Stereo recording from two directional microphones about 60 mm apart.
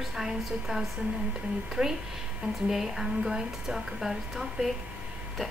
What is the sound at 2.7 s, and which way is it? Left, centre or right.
A woman's voice, centre.